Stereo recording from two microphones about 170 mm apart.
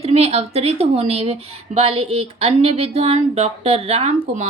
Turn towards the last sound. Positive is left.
turn(degrees=-35)  # may be behind; listen again after turning